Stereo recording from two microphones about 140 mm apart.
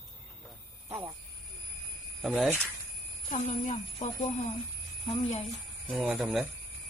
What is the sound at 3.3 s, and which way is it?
Speech, 60° left (ahead or behind).